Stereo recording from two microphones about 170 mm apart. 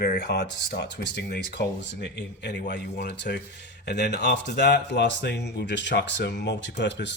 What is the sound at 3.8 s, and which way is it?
Speech, 80° left.